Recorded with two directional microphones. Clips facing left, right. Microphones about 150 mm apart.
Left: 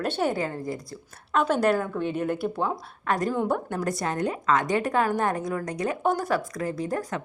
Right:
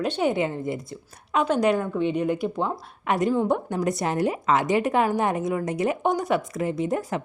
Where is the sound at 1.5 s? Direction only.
5° left (ahead or behind).